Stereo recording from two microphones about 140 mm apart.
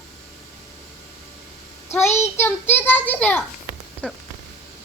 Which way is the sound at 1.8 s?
20° left (ahead or behind).